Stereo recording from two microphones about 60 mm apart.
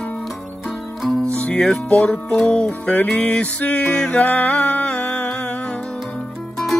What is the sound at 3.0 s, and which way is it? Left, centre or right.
Music, centre.